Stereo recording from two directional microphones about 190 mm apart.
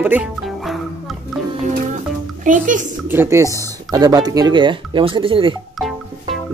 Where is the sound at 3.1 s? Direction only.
10° right (ahead or behind).